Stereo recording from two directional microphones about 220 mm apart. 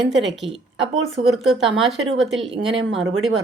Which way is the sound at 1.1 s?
25° right (ahead or behind).